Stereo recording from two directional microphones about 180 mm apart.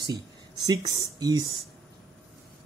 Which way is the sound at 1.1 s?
20° right (ahead or behind).